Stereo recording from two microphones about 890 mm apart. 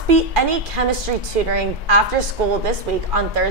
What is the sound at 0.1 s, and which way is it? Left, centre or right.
A woman's voice, right.